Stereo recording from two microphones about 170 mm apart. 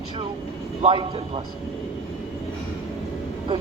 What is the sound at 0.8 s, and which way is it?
Speech, 30° right (ahead or behind).